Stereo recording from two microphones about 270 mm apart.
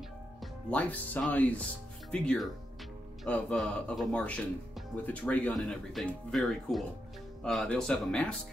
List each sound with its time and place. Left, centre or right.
0.4 s speech: centre